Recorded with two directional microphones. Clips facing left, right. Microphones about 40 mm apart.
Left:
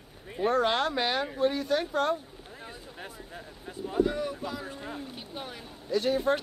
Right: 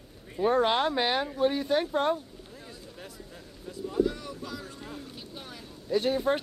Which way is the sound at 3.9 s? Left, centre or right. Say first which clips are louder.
Left 1 dB; left.